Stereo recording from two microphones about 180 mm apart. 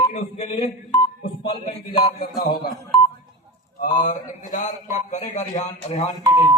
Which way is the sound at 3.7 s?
45° left (ahead or behind).